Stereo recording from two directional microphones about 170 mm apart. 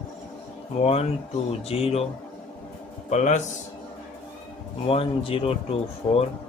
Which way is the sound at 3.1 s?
40° left (ahead or behind).